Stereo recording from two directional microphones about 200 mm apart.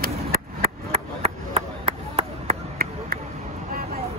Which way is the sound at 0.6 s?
30° right (ahead or behind).